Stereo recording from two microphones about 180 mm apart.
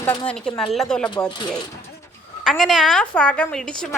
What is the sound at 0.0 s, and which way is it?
Speech, 20° left (ahead or behind).